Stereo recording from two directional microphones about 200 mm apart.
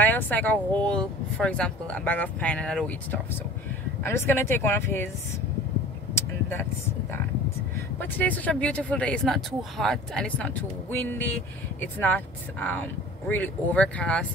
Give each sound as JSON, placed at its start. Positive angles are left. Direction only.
{"t": 0.0, "sound": "speech", "side_deg": 10}
{"t": 6.1, "sound": "vehicle", "side_deg": 10}
{"t": 8.0, "sound": "speech", "side_deg": 10}